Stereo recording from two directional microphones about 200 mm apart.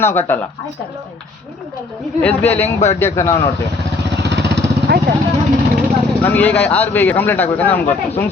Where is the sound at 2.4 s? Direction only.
30° left (ahead or behind).